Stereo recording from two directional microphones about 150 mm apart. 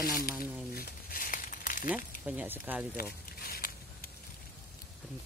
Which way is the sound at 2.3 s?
10° right (ahead or behind).